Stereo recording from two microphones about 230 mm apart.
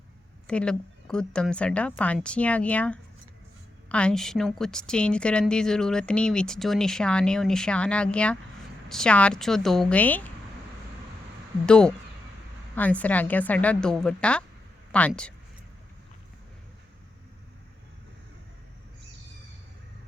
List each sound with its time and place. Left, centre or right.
0.4 s a woman's voice: centre
11.6 s a woman's voice: centre